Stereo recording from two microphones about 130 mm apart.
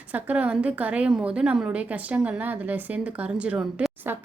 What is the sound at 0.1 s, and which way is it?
A woman's voice, 10° right (ahead or behind).